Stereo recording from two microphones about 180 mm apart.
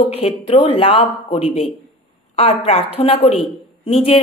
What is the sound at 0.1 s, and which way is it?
Speech, 30° left (ahead or behind).